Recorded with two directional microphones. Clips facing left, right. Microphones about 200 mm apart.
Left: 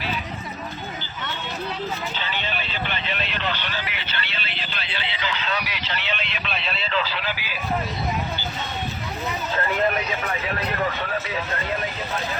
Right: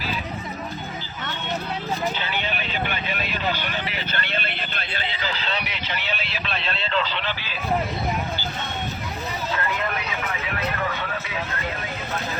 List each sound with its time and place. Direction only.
2.1 s vehicle: 10° right (ahead or behind)
4.1 s a sound: 50° right (ahead or behind); by 5.8 s 25° right (ahead or behind)
5.9 s vehicle: 10° right (ahead or behind)